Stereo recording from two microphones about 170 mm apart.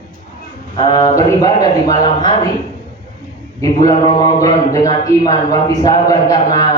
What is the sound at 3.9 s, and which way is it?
Speech, 25° left (ahead or behind).